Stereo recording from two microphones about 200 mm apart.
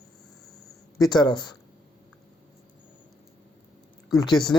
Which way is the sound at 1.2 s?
20° left (ahead or behind).